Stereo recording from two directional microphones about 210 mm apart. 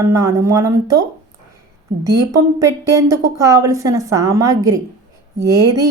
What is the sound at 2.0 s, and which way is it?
A woman's voice, 15° right (ahead or behind).